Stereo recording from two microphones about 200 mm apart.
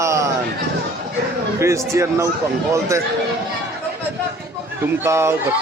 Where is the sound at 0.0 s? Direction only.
15° right (ahead or behind).